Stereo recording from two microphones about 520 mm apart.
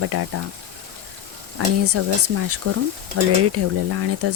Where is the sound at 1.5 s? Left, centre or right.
Right.